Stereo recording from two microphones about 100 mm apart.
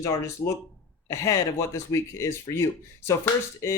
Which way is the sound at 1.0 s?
30° left (ahead or behind).